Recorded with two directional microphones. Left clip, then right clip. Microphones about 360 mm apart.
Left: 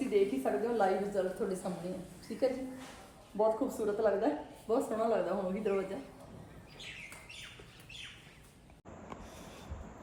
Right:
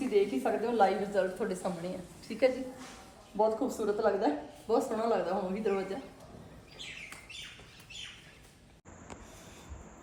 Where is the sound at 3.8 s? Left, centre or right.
Centre.